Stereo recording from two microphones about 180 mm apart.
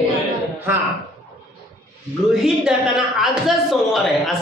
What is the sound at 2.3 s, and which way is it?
A man's voice, 5° right (ahead or behind).